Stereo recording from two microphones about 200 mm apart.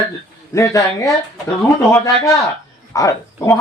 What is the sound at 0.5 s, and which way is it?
Speech, 15° left (ahead or behind).